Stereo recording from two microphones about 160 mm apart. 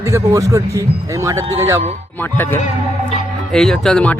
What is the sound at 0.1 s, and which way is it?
Speech, 20° right (ahead or behind).